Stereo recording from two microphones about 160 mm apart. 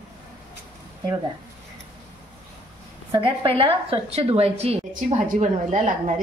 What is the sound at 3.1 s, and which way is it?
A woman's voice, 35° right (ahead or behind).